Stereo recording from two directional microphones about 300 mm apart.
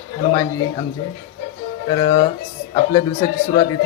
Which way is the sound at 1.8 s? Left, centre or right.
Centre.